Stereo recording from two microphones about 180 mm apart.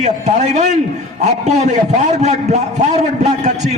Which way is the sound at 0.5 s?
40° right (ahead or behind).